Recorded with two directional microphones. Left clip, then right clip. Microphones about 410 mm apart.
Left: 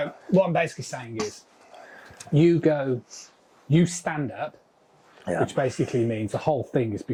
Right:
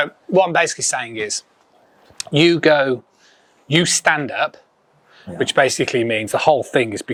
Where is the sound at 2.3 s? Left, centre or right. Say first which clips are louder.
Right 8 dB; centre.